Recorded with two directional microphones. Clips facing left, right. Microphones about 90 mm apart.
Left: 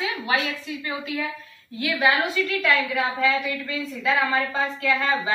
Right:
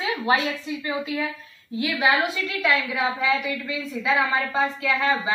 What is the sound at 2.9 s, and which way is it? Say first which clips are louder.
A woman's voice: left 1 dB; 5° right (ahead or behind).